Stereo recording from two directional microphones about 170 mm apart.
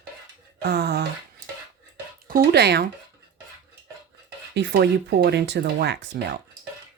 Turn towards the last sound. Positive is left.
turn(degrees=-75)  # may be behind; listen again after turning